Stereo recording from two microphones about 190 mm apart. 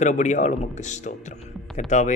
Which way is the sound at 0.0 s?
40° left (ahead or behind).